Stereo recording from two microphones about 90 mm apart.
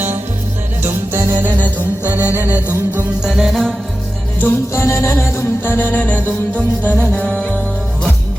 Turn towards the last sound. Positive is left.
turn(degrees=15)  # may be behind; listen again after turning